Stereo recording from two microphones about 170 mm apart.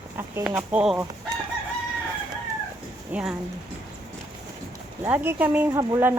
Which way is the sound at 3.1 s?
5° right (ahead or behind).